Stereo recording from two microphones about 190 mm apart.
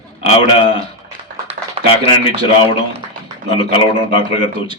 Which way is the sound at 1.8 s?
30° right (ahead or behind).